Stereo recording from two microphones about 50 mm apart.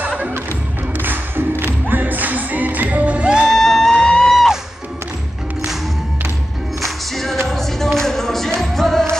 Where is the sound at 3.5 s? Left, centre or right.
Centre.